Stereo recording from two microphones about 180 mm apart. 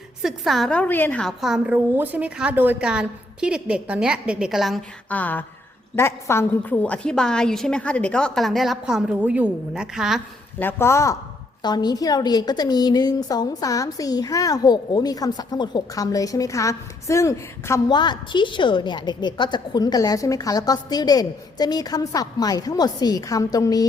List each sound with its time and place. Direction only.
0.2 s a woman's voice: centre (ahead or behind)
10.6 s a woman's voice: 10° left (ahead or behind)